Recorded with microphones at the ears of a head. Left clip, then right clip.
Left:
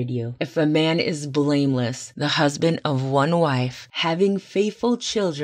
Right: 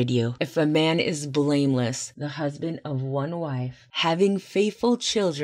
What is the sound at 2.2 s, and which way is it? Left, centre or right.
Speech, left.